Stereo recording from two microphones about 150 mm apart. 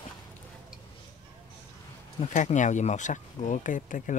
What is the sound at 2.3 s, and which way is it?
Speech, 55° left (ahead or behind).